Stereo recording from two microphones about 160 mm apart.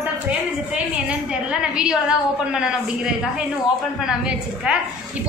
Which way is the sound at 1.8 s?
5° right (ahead or behind).